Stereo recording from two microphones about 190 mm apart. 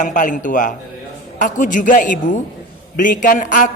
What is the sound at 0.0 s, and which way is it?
A man's voice, 45° left (ahead or behind).